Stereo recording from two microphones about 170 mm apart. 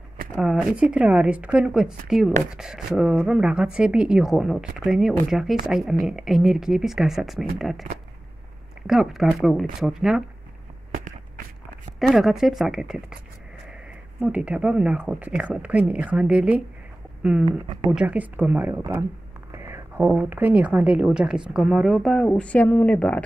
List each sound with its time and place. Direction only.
0.4 s a woman's voice: centre (ahead or behind)
8.8 s a woman's voice: centre (ahead or behind)
12.0 s a woman's voice: centre (ahead or behind)
14.2 s speech: 5° right (ahead or behind)
17.5 s speech: 30° right (ahead or behind)
17.9 s speech: 10° right (ahead or behind)
19.5 s a sound: 15° right (ahead or behind)
20.1 s a woman's voice: 10° right (ahead or behind); by 23.2 s 10° left (ahead or behind)